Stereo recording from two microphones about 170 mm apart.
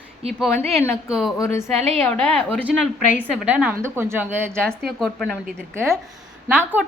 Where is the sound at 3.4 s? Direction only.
10° right (ahead or behind).